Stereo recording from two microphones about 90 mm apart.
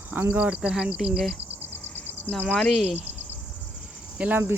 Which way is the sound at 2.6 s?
5° left (ahead or behind).